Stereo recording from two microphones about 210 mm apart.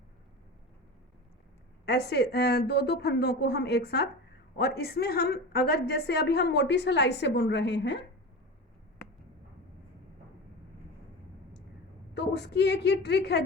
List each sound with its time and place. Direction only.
1.8 s a woman's voice: 50° left (ahead or behind)
12.1 s a woman's voice: 55° left (ahead or behind)